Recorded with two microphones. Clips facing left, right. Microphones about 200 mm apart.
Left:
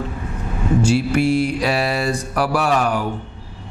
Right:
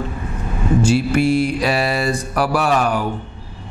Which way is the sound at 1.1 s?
15° right (ahead or behind).